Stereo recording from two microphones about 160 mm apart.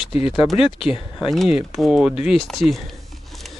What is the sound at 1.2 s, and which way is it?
Speech, centre (ahead or behind).